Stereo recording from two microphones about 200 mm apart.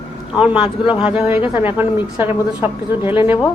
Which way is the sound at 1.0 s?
5° right (ahead or behind).